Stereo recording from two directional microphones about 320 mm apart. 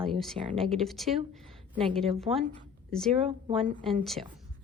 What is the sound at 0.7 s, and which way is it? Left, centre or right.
A woman's voice, centre.